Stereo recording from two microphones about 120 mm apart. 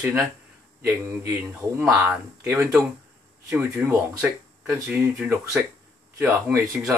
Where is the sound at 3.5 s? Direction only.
10° right (ahead or behind).